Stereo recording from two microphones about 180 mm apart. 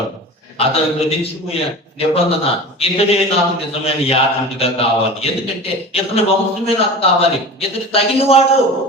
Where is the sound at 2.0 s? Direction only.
35° left (ahead or behind).